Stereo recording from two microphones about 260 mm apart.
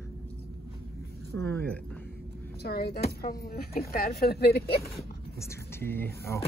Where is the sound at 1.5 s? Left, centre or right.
Centre.